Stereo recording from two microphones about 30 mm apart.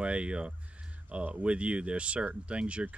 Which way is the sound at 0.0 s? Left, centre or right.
Right.